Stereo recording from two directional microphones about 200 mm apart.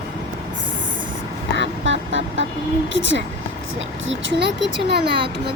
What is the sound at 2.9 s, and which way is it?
A child's voice, 65° right (ahead or behind).